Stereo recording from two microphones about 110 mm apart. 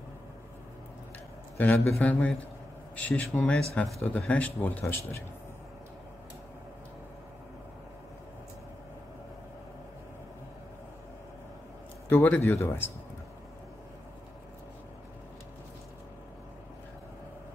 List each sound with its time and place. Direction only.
1.6 s speech: 15° left (ahead or behind)
12.1 s speech: 15° left (ahead or behind)